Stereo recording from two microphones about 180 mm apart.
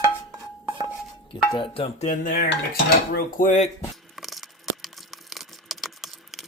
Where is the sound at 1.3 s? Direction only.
30° left (ahead or behind).